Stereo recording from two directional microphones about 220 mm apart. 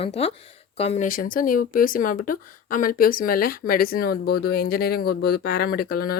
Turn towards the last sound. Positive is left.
turn(degrees=45)  # may be behind; listen again after turning